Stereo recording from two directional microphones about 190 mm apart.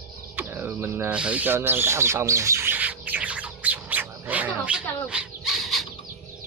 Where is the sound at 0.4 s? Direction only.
10° right (ahead or behind).